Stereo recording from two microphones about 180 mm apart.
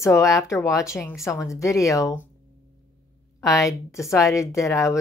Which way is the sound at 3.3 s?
15° left (ahead or behind).